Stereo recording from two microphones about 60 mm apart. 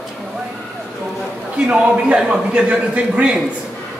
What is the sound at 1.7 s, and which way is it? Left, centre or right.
A man's voice, centre.